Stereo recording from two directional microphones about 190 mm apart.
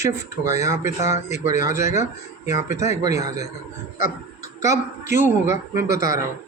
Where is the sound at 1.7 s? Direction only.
15° right (ahead or behind).